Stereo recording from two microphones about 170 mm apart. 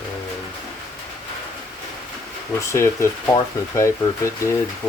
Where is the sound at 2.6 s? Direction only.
15° left (ahead or behind).